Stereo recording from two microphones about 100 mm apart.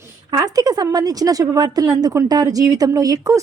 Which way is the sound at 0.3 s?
40° right (ahead or behind).